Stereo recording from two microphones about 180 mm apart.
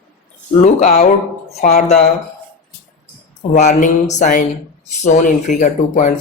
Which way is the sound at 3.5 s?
40° left (ahead or behind).